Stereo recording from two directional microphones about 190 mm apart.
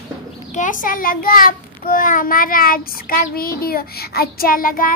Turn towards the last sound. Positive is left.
turn(degrees=50)  # may be behind; listen again after turning